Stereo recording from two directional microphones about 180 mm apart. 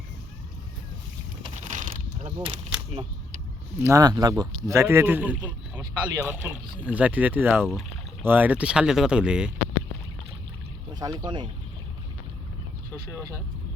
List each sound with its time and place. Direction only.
1.6 s pulleys: 45° right (ahead or behind)
2.4 s speech: 30° right (ahead or behind)
3.8 s speech: 15° right (ahead or behind)
11.0 s speech: 20° right (ahead or behind)